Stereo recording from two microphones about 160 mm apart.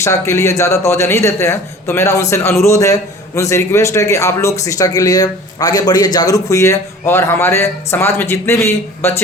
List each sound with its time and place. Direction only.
0.0 s a man's voice: 20° left (ahead or behind)